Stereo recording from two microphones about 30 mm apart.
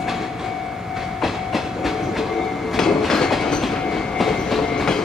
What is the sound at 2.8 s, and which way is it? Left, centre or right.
Train, centre.